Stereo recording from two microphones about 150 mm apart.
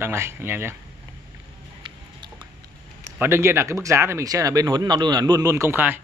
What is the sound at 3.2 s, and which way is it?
Speech, 15° right (ahead or behind).